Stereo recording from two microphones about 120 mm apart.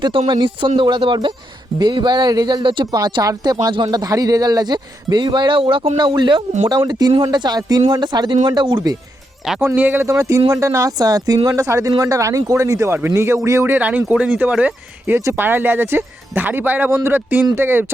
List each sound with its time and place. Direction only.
0.3 s a man's voice: 40° right (ahead or behind)
9.6 s speech: 15° right (ahead or behind)